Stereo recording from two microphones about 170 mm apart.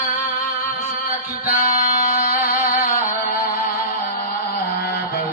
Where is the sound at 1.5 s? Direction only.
55° left (ahead or behind).